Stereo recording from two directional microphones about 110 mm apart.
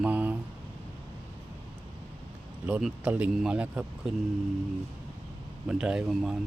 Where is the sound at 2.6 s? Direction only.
10° right (ahead or behind).